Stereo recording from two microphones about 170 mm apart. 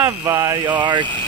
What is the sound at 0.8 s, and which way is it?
Speech, 25° right (ahead or behind).